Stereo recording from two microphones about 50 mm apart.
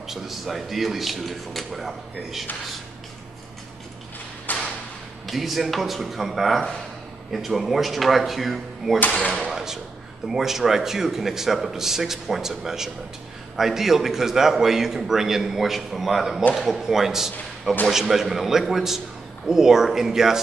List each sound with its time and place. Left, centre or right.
0.0 s speech: centre
4.5 s a sound: left
5.2 s a man's voice: centre